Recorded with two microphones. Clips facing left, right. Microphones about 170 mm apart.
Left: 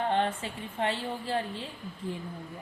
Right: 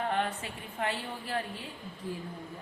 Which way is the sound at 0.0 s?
30° left (ahead or behind).